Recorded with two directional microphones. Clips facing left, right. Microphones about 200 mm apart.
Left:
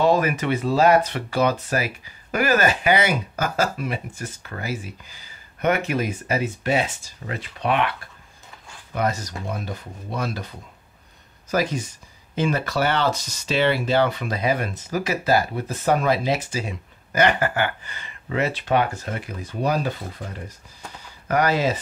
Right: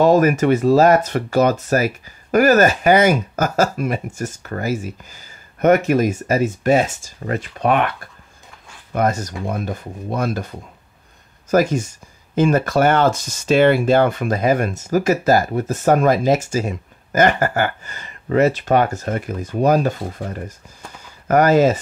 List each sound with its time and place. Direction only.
0.0 s speech: 45° right (ahead or behind)
8.9 s speech: 50° right (ahead or behind)
11.5 s speech: 45° right (ahead or behind)